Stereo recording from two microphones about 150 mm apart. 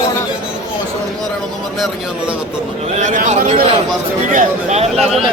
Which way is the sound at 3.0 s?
55° right (ahead or behind).